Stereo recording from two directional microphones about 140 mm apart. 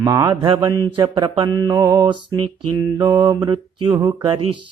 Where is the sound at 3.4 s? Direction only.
30° right (ahead or behind).